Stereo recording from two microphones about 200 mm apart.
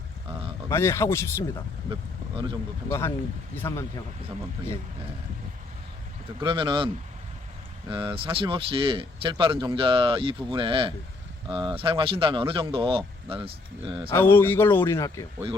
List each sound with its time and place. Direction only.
0.7 s speech: 15° left (ahead or behind)
1.9 s speech: 25° right (ahead or behind)
3.5 s speech: 10° left (ahead or behind)
6.4 s speech: 25° right (ahead or behind)
14.1 s speech: 10° left (ahead or behind)